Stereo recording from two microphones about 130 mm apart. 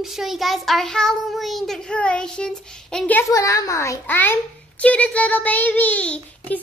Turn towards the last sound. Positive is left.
turn(degrees=10)  # may be behind; listen again after turning